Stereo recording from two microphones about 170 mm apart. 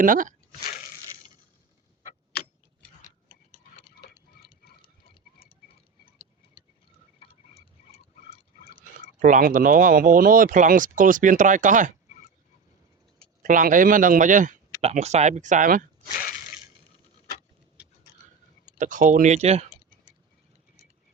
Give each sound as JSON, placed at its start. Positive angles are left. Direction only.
{"t": 0.0, "sound": "speech", "side_deg": -50}
{"t": 4.0, "sound": "tick-tock", "side_deg": 65}
{"t": 5.4, "sound": "clock", "side_deg": 35}
{"t": 7.2, "sound": "tick-tock", "side_deg": 35}
{"t": 9.2, "sound": "speech", "side_deg": -50}
{"t": 13.4, "sound": "speech", "side_deg": -50}
{"t": 16.1, "sound": "a sound", "side_deg": 55}
{"t": 18.8, "sound": "speech", "side_deg": -50}
{"t": 19.7, "sound": "typing", "side_deg": 35}